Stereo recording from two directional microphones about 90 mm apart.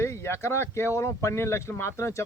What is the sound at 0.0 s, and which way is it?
Speech, 30° left (ahead or behind).